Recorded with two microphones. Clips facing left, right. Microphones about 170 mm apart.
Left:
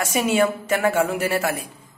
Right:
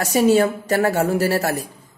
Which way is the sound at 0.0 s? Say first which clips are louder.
Right 4 dB; 35° right (ahead or behind).